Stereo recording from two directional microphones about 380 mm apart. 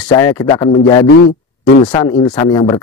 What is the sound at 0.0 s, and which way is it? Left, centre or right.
Speech, centre.